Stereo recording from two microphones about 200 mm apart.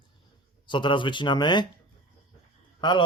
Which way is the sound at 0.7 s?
25° left (ahead or behind).